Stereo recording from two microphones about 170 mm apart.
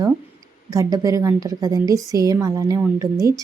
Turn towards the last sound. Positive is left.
turn(degrees=-20)  # may be behind; listen again after turning